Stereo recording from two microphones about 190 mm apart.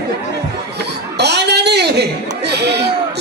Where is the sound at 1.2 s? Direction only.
60° right (ahead or behind).